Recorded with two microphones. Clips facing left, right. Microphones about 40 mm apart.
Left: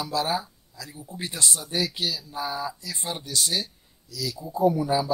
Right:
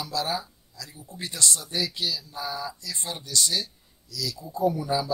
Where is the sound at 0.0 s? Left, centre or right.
Centre.